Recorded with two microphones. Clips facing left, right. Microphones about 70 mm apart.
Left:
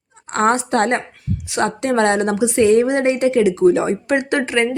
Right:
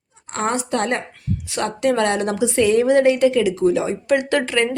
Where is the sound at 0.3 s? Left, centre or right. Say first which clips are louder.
Left 5 dB; left.